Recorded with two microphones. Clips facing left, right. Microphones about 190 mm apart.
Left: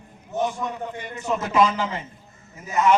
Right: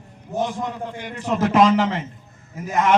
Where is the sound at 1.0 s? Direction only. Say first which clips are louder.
Right 6 dB; 90° right.